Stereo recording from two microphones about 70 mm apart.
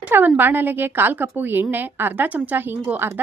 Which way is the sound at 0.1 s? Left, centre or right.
Right.